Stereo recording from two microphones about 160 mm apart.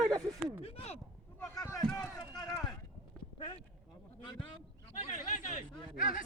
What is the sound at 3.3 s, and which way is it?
Clip-clop, 30° left (ahead or behind).